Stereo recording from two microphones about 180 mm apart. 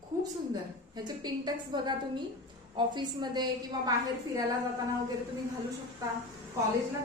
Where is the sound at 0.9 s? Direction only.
25° right (ahead or behind).